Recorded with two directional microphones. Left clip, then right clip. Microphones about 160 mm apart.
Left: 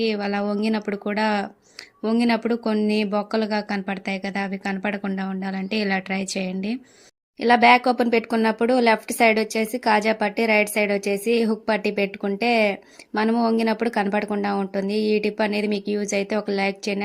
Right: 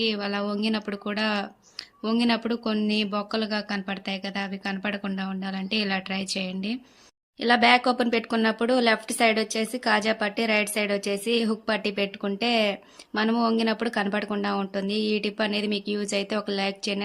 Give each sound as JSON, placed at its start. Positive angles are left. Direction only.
{"t": 0.0, "sound": "speech", "side_deg": 25}